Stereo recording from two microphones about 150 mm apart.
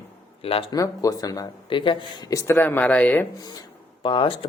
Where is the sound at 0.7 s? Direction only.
25° left (ahead or behind).